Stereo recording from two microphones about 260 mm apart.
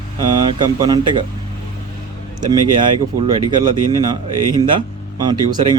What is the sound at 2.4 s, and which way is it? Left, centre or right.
Speech, centre.